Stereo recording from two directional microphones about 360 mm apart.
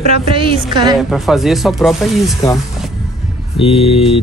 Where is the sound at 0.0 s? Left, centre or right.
Centre.